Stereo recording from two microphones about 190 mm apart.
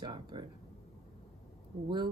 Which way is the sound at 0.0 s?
25° right (ahead or behind).